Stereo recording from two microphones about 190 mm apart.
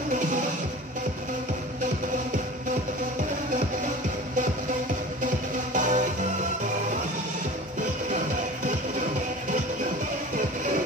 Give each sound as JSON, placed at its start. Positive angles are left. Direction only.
{"t": 5.2, "sound": "music", "side_deg": -40}